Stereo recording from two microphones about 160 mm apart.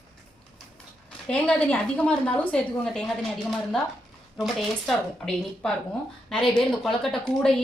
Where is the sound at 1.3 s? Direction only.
5° left (ahead or behind).